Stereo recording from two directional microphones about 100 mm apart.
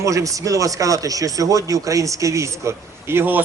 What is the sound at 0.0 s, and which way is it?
A man's voice, 30° right (ahead or behind).